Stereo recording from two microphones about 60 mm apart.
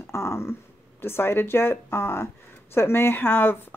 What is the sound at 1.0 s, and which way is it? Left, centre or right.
Speech, left.